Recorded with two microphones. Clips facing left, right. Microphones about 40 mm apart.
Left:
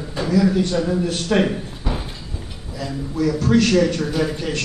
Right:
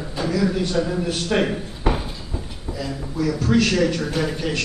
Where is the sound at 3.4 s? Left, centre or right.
Centre.